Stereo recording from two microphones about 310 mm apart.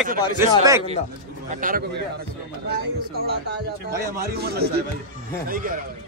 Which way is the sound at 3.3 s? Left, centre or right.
Right.